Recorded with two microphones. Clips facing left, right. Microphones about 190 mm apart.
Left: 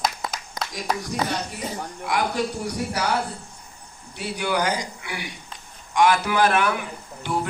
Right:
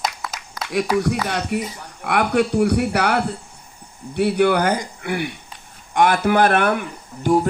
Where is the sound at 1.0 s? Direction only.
70° right (ahead or behind).